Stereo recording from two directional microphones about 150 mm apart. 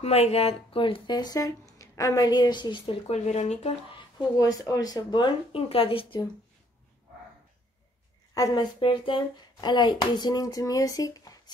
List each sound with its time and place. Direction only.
0.0 s speech: 45° left (ahead or behind)
4.4 s speech: 25° left (ahead or behind)
8.4 s speech: 25° left (ahead or behind)